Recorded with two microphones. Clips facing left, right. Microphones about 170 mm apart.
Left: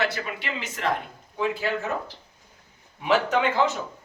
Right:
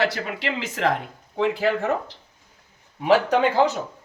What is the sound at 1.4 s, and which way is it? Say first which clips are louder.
Speech: right 5 dB; 70° right (ahead or behind).